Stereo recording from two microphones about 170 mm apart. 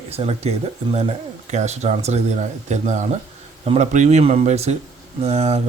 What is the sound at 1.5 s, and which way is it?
Speech, 40° right (ahead or behind).